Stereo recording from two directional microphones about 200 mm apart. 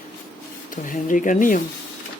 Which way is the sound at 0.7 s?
40° left (ahead or behind).